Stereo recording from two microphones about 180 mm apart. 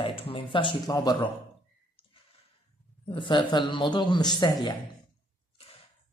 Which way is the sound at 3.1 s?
25° left (ahead or behind).